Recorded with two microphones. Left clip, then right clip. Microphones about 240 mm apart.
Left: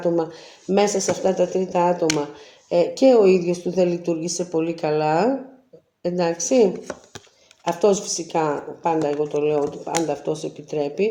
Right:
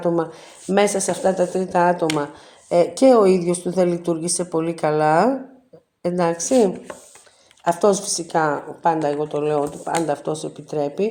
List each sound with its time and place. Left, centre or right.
0.7 s a woman's voice: right
7.7 s a woman's voice: right